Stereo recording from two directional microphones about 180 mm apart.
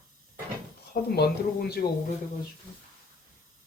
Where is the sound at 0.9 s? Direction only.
60° left (ahead or behind).